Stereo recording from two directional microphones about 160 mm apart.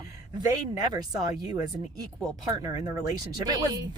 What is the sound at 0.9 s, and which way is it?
Speech, 25° right (ahead or behind).